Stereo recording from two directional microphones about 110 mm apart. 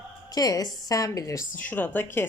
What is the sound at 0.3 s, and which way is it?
A woman's voice, 35° left (ahead or behind).